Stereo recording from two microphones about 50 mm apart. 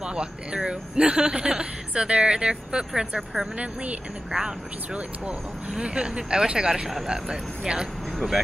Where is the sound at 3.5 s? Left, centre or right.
Right.